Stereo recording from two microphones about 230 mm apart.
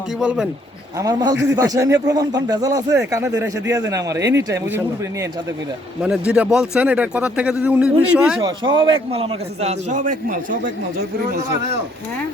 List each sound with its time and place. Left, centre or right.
0.2 s speech: centre
0.9 s speech: centre
6.0 s speech: centre
8.4 s a man's voice: right